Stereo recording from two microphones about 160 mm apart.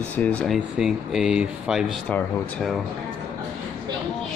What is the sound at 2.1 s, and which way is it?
Speech, 5° left (ahead or behind).